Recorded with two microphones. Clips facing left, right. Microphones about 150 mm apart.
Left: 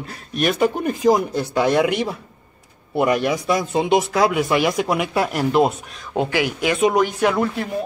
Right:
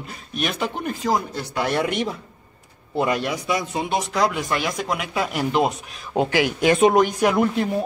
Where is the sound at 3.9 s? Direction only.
5° left (ahead or behind).